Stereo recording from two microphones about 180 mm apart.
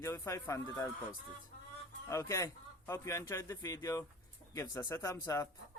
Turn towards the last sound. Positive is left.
turn(degrees=15)  # may be behind; listen again after turning